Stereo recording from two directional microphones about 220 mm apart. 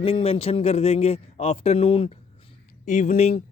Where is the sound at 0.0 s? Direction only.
25° left (ahead or behind).